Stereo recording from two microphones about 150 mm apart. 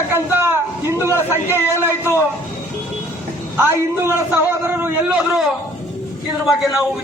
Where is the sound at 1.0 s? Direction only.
15° right (ahead or behind).